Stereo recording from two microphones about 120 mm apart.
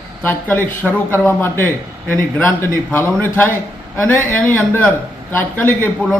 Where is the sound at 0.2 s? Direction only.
15° left (ahead or behind).